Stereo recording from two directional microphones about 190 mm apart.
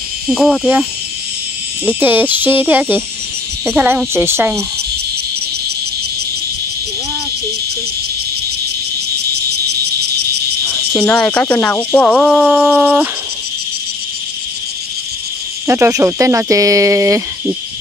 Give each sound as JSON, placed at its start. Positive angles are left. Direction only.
{"t": 0.3, "sound": "cricket", "side_deg": 0}
{"t": 1.9, "sound": "speech", "side_deg": -10}
{"t": 9.3, "sound": "cricket", "side_deg": -60}
{"t": 10.9, "sound": "cricket", "side_deg": 5}
{"t": 15.6, "sound": "speech", "side_deg": -15}